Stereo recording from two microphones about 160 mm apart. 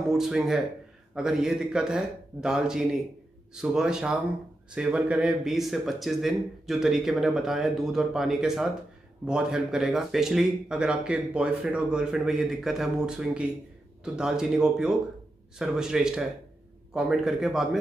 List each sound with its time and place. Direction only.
0.1 s speech: 5° right (ahead or behind)